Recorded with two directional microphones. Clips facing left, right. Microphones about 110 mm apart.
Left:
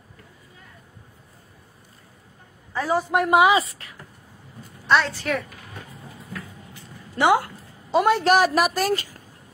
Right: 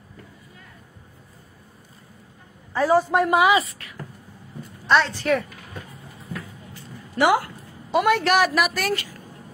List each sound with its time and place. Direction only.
2.9 s a man's voice: 5° left (ahead or behind)
3.3 s a woman's voice: 30° left (ahead or behind)
4.8 s a woman's voice: centre (ahead or behind)
6.7 s a sound: 20° left (ahead or behind)
7.9 s a woman's voice: 30° left (ahead or behind)
8.3 s speech: 40° left (ahead or behind)